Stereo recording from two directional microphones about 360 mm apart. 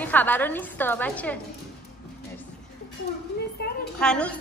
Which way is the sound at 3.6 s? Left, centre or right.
Left.